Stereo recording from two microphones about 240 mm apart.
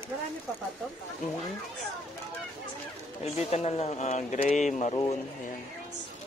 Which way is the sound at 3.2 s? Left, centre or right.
Left.